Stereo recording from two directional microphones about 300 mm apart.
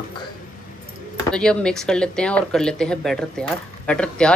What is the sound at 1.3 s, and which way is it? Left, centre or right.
Speech, centre.